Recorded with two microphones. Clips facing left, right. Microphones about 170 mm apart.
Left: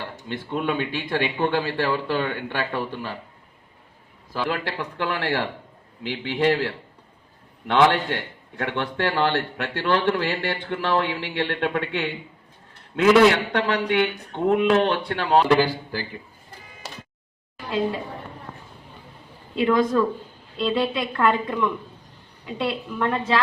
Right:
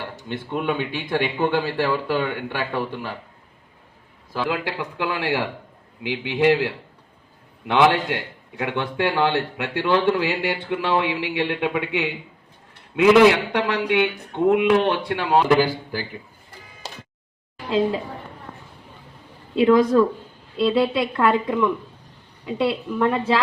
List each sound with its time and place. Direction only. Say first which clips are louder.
0.3 s a man's voice: right 1 dB; 10° right (ahead or behind)
4.4 s a man's voice: right 2 dB; 15° right (ahead or behind)
19.5 s speech: right 5 dB; 25° right (ahead or behind)
20.6 s a man's voice: right 4 dB; 5° right (ahead or behind)